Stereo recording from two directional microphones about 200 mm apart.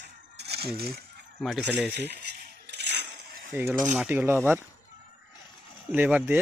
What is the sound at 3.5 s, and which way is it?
Speech, 10° right (ahead or behind).